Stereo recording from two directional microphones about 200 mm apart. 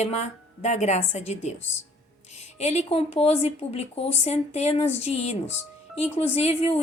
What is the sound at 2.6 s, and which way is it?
Speech, 30° left (ahead or behind).